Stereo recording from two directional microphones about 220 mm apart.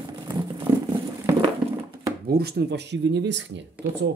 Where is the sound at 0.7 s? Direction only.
15° right (ahead or behind).